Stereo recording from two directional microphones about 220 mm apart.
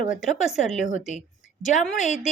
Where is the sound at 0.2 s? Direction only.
Centre (ahead or behind).